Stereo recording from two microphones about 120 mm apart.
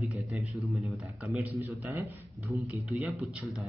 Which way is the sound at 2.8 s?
Centre (ahead or behind).